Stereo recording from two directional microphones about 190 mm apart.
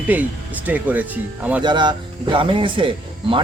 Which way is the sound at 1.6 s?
25° right (ahead or behind).